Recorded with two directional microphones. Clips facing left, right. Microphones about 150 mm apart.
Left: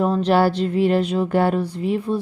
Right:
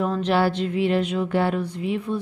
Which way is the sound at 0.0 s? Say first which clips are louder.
Left 4 dB; 35° left (ahead or behind).